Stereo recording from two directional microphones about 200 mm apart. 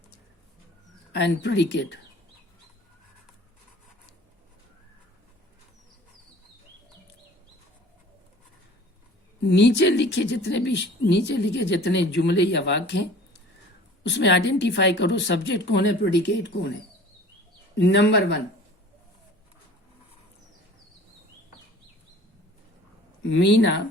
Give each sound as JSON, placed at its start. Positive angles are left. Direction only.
{"t": 1.1, "sound": "a woman's voice", "side_deg": 60}
{"t": 9.4, "sound": "a woman's voice", "side_deg": 60}
{"t": 17.7, "sound": "a woman's voice", "side_deg": 60}
{"t": 23.2, "sound": "a woman's voice", "side_deg": 65}